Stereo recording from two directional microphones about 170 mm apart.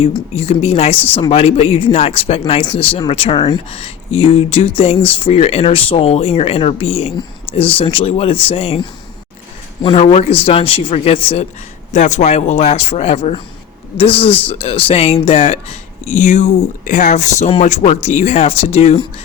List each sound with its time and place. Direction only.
0.3 s speech: 35° left (ahead or behind)
11.9 s speech: 45° left (ahead or behind)